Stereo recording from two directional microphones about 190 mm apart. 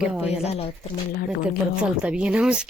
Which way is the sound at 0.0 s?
5° right (ahead or behind).